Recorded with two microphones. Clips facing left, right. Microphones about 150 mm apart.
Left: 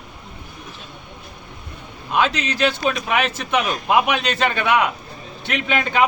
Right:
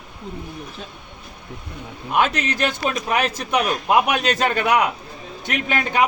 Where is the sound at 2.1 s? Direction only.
50° right (ahead or behind).